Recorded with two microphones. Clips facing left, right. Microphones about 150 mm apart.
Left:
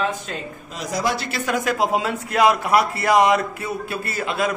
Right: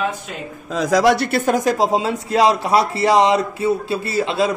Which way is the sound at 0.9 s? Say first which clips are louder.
Right 9 dB; 85° right.